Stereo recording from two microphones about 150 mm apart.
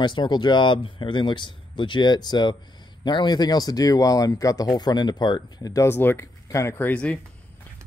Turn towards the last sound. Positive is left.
turn(degrees=10)  # may be behind; listen again after turning